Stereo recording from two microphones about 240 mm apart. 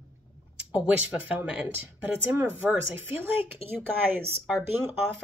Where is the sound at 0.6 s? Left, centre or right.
Centre.